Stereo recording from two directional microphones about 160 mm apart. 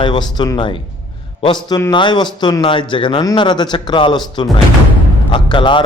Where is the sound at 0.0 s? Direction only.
30° left (ahead or behind).